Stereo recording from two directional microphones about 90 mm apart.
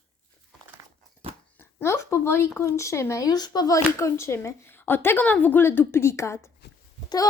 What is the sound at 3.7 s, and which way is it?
A woman's voice, 30° left (ahead or behind).